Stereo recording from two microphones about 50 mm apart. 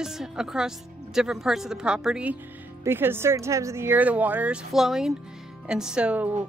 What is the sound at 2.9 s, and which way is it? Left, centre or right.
Speech, right.